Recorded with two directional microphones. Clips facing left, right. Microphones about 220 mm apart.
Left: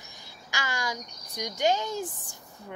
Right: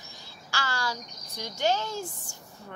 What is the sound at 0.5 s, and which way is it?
Speech, 15° left (ahead or behind).